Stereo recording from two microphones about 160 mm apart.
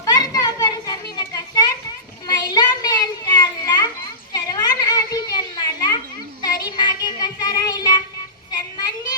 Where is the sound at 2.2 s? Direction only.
25° left (ahead or behind).